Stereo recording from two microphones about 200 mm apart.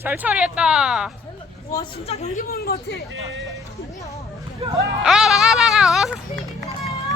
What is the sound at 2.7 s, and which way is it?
Speech, 50° left (ahead or behind).